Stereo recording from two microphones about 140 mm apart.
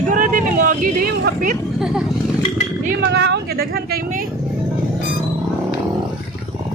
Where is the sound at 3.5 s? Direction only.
90° right.